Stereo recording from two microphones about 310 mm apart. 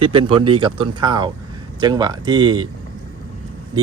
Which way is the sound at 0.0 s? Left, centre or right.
Centre.